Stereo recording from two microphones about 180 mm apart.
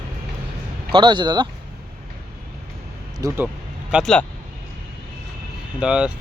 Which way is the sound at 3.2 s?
20° right (ahead or behind).